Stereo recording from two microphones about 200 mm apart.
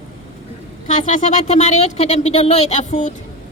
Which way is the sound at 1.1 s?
35° left (ahead or behind).